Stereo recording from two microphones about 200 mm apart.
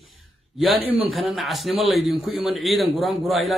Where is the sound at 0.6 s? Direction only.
Centre (ahead or behind).